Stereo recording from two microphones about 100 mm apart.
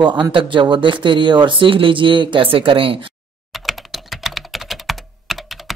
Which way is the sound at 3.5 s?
Centre (ahead or behind).